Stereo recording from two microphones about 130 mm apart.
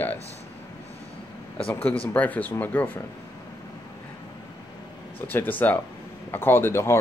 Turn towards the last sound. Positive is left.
turn(degrees=20)  # may be behind; listen again after turning